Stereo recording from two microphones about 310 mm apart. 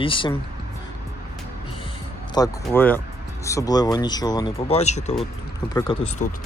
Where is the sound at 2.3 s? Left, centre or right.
Centre.